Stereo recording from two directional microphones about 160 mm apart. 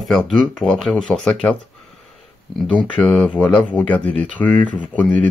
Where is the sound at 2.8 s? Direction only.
5° left (ahead or behind).